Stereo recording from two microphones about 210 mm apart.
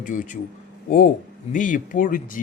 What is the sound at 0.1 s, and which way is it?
A man's voice, 40° left (ahead or behind).